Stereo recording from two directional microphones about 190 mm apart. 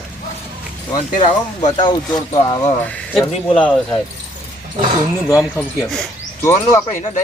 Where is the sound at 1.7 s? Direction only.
25° left (ahead or behind).